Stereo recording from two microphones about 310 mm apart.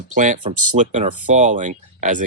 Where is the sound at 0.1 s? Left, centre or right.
Right.